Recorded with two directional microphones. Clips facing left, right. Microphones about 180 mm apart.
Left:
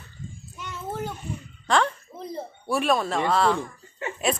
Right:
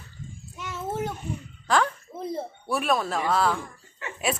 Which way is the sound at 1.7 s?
5° right (ahead or behind).